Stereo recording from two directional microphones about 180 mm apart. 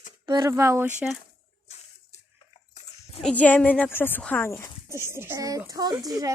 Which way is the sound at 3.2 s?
5° left (ahead or behind).